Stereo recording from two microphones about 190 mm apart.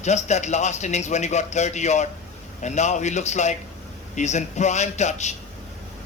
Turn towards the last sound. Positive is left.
turn(degrees=35)  # may be behind; listen again after turning